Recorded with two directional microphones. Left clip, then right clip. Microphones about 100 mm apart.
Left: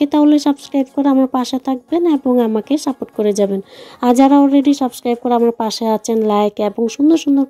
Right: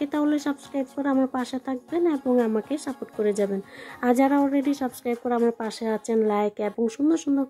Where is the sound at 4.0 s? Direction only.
45° left (ahead or behind).